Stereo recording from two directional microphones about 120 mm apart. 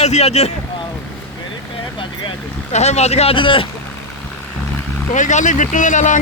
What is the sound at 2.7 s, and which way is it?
Speech, 65° left (ahead or behind).